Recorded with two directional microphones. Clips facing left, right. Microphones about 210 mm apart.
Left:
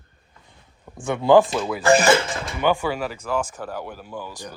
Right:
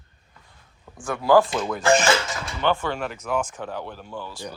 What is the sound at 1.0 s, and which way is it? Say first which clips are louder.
Speech: left 3 dB; 25° left (ahead or behind).